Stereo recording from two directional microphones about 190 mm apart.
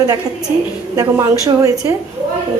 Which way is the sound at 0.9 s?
15° right (ahead or behind).